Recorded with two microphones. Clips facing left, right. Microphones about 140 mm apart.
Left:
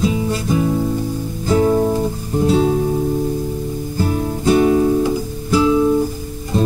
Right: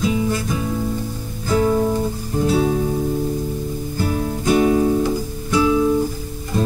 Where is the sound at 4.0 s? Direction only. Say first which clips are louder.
Left 2 dB; 25° left (ahead or behind).